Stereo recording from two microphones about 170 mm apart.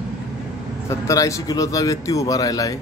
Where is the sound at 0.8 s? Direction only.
20° left (ahead or behind).